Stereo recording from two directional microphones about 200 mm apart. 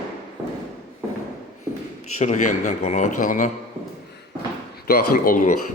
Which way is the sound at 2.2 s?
35° left (ahead or behind).